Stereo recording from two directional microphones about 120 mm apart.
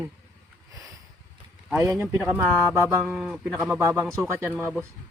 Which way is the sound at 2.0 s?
Centre (ahead or behind).